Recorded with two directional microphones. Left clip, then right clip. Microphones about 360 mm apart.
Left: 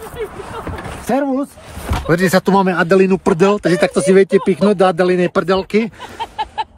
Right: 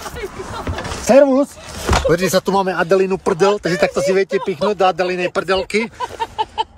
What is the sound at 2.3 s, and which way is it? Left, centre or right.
Speech, left.